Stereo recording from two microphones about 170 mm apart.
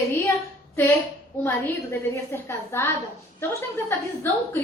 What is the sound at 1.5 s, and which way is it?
A woman's voice, 15° left (ahead or behind).